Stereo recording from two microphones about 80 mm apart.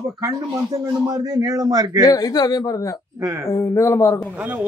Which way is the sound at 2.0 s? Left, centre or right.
Left.